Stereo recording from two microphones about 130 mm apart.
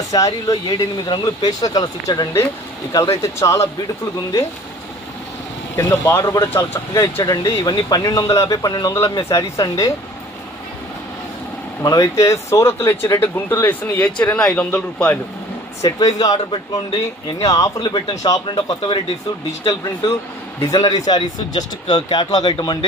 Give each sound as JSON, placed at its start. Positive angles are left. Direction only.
{"t": 0.1, "sound": "speech", "side_deg": 30}
{"t": 5.8, "sound": "speech", "side_deg": 20}
{"t": 11.8, "sound": "speech", "side_deg": 25}
{"t": 15.8, "sound": "speech", "side_deg": 30}
{"t": 19.6, "sound": "speech", "side_deg": 20}